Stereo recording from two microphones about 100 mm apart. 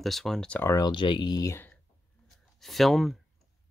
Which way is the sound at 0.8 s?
50° left (ahead or behind).